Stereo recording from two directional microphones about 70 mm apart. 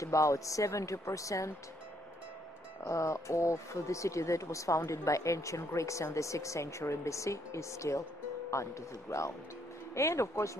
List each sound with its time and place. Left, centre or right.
0.0 s speech: left
2.9 s speech: left